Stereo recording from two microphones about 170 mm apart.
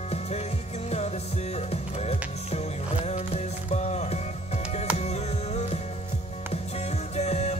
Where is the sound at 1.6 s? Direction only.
40° left (ahead or behind).